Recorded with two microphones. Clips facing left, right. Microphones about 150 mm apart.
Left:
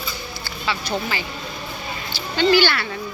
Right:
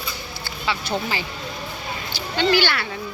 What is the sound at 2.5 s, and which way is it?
Speech, 10° right (ahead or behind).